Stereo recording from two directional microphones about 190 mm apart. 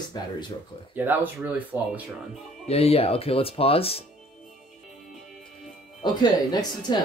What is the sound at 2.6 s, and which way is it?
Speech, 30° left (ahead or behind).